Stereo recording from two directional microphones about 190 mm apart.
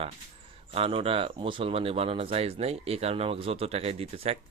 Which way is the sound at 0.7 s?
30° right (ahead or behind).